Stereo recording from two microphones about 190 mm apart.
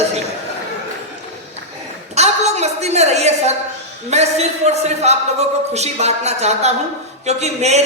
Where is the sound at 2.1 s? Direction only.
35° right (ahead or behind).